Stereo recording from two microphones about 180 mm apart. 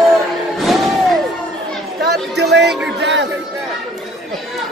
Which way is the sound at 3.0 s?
75° right (ahead or behind).